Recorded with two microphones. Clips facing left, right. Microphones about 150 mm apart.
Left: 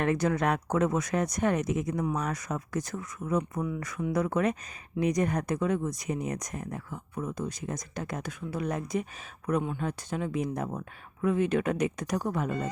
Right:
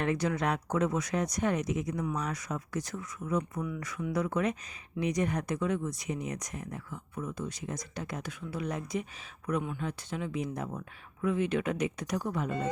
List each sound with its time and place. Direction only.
0.0 s speech: 50° left (ahead or behind)